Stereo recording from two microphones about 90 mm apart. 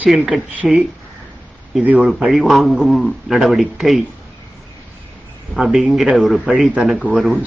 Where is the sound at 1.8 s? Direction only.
15° right (ahead or behind).